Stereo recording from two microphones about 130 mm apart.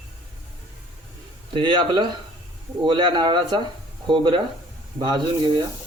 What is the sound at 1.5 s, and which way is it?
Speech, 40° right (ahead or behind).